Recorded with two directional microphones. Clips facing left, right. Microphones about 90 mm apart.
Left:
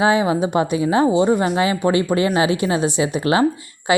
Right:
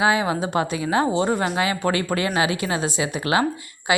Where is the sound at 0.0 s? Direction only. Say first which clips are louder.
Left 4 dB; 25° left (ahead or behind).